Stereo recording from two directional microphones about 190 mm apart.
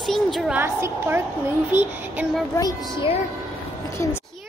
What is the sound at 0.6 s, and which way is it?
A woman's voice, 10° right (ahead or behind).